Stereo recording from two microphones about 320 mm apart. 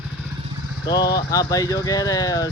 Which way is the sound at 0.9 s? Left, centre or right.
Centre.